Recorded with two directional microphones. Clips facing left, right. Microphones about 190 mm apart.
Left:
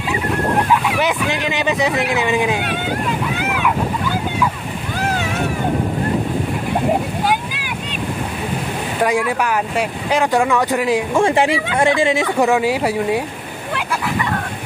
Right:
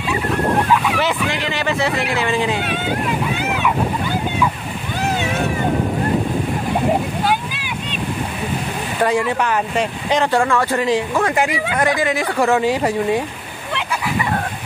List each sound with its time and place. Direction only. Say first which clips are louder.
0.8 s speech: left 1 dB; 15° left (ahead or behind)
9.0 s speech: even; 10° left (ahead or behind)
11.1 s speech: left 3 dB; 25° left (ahead or behind)
12.5 s speech: even; 10° left (ahead or behind)